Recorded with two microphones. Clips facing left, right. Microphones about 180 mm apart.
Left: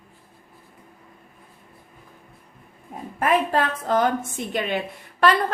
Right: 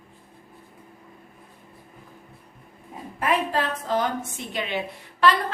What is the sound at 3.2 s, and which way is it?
A woman's voice, 50° left (ahead or behind).